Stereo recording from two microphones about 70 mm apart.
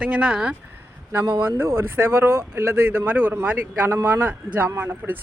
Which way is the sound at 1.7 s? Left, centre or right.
Right.